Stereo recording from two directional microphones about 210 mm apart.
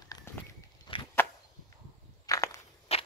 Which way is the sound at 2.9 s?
30° left (ahead or behind).